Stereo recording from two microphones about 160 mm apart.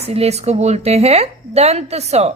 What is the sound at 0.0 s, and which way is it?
A woman's voice, 40° right (ahead or behind).